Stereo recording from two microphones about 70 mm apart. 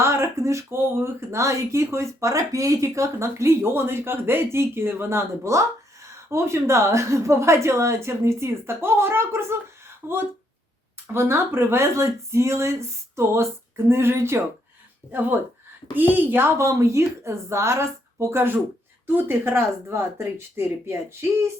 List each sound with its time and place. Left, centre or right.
0.0 s speech: right
11.1 s speech: right
15.0 s speech: left
16.0 s a woman's voice: right
16.6 s speech: right